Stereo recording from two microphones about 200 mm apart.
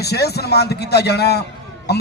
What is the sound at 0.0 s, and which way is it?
A man's voice, 55° left (ahead or behind).